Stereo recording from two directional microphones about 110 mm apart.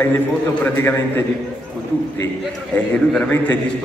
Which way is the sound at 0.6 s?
20° left (ahead or behind).